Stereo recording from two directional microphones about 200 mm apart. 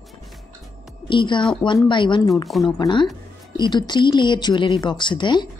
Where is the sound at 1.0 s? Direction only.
25° left (ahead or behind).